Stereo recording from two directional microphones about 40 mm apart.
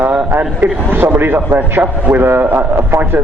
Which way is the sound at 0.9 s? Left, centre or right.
Right.